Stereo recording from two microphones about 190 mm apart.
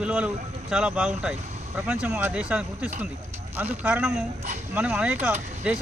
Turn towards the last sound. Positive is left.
turn(degrees=-5)  # may be behind; listen again after turning